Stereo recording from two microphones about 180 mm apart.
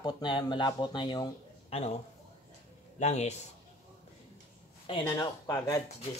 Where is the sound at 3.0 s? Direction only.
40° left (ahead or behind).